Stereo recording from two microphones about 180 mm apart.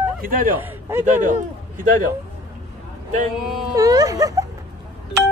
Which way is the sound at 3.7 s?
20° right (ahead or behind).